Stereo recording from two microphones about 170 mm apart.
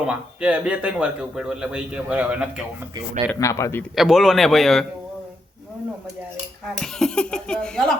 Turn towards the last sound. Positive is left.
turn(degrees=5)  # may be behind; listen again after turning